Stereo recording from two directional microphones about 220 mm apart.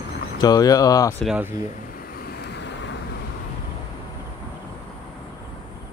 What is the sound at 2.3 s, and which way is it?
Vehicle, 50° left (ahead or behind).